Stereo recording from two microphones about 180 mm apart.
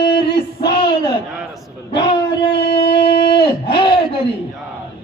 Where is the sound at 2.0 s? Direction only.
25° left (ahead or behind).